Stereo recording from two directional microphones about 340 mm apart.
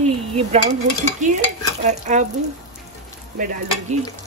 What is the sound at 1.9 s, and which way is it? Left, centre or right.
Speech, right.